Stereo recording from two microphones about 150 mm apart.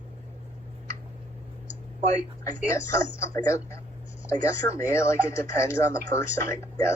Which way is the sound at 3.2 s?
20° left (ahead or behind).